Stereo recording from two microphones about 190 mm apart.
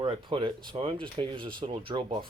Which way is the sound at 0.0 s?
25° right (ahead or behind).